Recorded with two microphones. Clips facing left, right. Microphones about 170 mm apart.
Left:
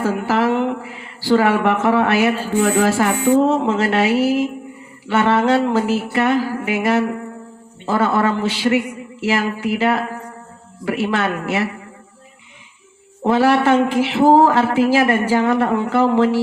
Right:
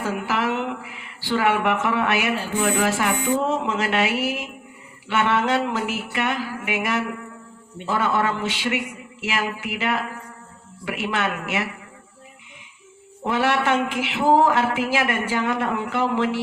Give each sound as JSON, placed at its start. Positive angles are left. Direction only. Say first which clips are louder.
{"t": 0.0, "sound": "speech", "louder": "left 6 dB", "side_deg": 40}
{"t": 13.2, "sound": "speech", "louder": "left 7 dB", "side_deg": 35}